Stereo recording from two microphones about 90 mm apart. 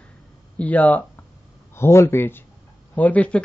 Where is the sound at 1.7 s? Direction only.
30° left (ahead or behind).